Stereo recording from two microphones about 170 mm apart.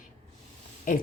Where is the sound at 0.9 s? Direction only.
55° left (ahead or behind).